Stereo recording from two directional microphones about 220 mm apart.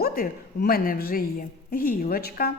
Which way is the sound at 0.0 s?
45° left (ahead or behind).